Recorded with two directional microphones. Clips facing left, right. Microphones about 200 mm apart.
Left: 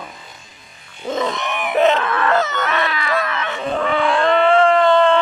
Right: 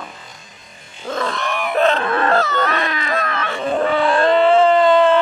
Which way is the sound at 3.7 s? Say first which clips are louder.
Right 2 dB; 35° right (ahead or behind).